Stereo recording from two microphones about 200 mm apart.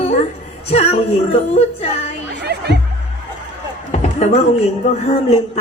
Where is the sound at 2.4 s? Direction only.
55° right (ahead or behind).